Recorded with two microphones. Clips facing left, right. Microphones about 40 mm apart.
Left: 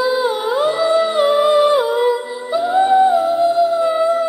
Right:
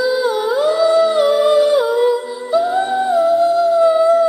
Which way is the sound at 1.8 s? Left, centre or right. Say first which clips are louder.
Right 1 dB; centre.